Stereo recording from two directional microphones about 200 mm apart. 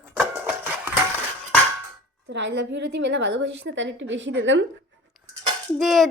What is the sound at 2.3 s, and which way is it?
A woman's voice, 60° right (ahead or behind).